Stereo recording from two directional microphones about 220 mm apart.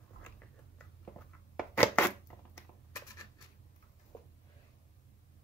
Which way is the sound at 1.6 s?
10° left (ahead or behind).